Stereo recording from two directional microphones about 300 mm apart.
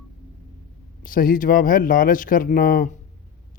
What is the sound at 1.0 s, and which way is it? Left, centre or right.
Speech, left.